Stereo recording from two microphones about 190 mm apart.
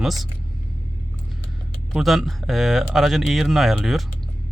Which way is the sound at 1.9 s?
Centre (ahead or behind).